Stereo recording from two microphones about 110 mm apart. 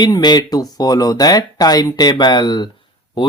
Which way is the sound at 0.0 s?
40° left (ahead or behind).